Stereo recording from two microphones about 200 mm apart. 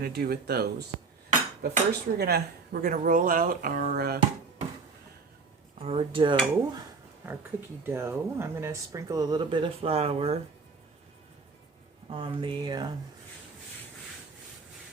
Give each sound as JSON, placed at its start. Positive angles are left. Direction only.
{"t": 0.0, "sound": "speech", "side_deg": -50}
{"t": 5.8, "sound": "speech", "side_deg": -30}
{"t": 7.9, "sound": "speech", "side_deg": -10}
{"t": 12.1, "sound": "speech", "side_deg": -25}